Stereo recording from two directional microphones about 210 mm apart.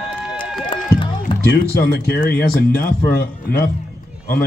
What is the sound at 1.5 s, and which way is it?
Speech, 50° left (ahead or behind).